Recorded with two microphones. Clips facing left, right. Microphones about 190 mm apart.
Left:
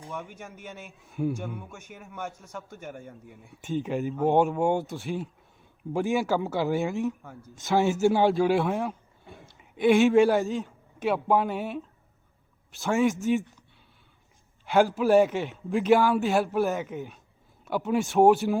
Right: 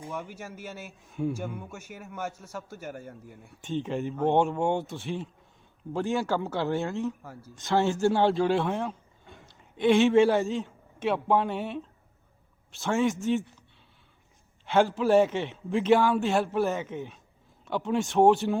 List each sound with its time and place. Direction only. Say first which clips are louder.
0.1 s a man's voice: even; 5° right (ahead or behind)
5.9 s speech: left 2 dB; 15° left (ahead or behind)
6.8 s speech: left 2 dB; 15° left (ahead or behind)
7.2 s a man's voice: even; 5° right (ahead or behind)
7.8 s speech: left 2 dB; 10° left (ahead or behind)
8.4 s a man's voice: left 2 dB; 5° left (ahead or behind)
14.7 s a man's voice: left 1 dB; centre (ahead or behind)